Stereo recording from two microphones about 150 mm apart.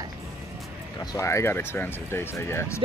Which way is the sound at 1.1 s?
20° left (ahead or behind).